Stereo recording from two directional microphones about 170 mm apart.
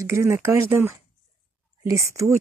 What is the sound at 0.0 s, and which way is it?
Speech, 15° right (ahead or behind).